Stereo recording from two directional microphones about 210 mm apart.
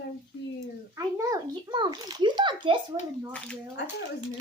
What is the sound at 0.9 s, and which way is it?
A child's voice, 15° right (ahead or behind).